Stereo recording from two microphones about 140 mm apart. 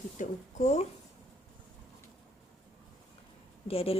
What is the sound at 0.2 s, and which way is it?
Speech, 55° left (ahead or behind).